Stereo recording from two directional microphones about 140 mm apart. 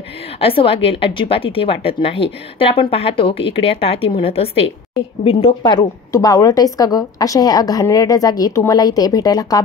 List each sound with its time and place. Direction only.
0.4 s a woman's voice: 40° left (ahead or behind)